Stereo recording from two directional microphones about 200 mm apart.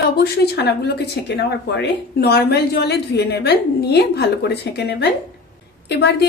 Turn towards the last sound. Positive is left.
turn(degrees=55)  # may be behind; listen again after turning